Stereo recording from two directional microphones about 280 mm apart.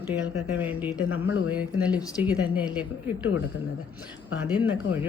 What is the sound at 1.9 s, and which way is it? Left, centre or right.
Speech, centre.